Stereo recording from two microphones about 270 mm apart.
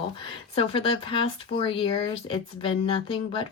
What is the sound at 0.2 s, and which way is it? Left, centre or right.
Speech, centre.